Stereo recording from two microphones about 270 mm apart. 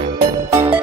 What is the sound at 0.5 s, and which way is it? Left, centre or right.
Music, centre.